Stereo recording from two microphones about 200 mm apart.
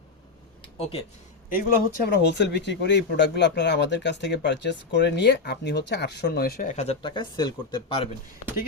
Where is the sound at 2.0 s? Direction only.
55° left (ahead or behind); by 8.1 s 25° left (ahead or behind).